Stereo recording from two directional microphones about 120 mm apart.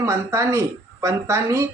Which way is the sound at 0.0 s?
25° right (ahead or behind).